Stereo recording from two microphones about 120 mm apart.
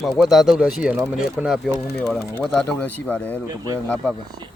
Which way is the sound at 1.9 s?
5° left (ahead or behind).